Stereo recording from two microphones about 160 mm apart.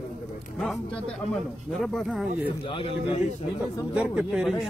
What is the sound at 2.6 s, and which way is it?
Speech, 35° left (ahead or behind).